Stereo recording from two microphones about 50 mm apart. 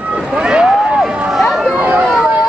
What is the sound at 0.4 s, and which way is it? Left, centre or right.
Vehicle, centre.